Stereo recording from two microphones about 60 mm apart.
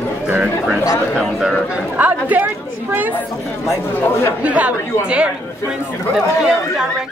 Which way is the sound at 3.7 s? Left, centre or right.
Left.